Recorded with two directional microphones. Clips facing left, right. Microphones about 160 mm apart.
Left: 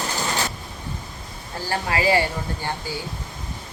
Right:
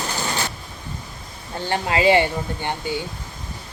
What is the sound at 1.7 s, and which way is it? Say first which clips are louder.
Speech: right 4 dB; 25° right (ahead or behind).